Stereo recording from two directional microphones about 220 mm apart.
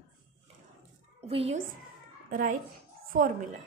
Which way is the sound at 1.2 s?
25° right (ahead or behind).